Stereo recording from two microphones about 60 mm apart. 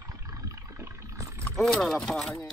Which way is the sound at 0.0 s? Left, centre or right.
Right.